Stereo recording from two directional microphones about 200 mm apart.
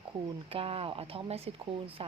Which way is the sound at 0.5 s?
30° right (ahead or behind).